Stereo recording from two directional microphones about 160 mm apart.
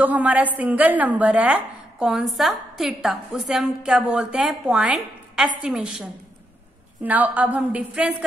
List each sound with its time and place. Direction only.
0.0 s a woman's voice: 10° right (ahead or behind)